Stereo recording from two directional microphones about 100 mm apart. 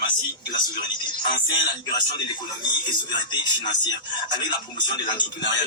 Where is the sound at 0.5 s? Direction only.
50° left (ahead or behind).